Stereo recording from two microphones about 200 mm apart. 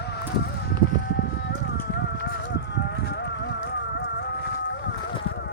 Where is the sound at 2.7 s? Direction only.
60° left (ahead or behind).